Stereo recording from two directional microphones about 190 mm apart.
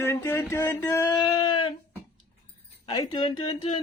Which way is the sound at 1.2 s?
25° left (ahead or behind).